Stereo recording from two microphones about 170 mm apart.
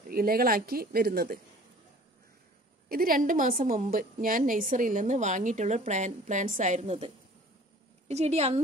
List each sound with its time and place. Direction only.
0.1 s speech: 60° right (ahead or behind)
2.9 s a woman's voice: 55° right (ahead or behind); by 7.1 s 40° right (ahead or behind)
8.1 s a woman's voice: 40° right (ahead or behind)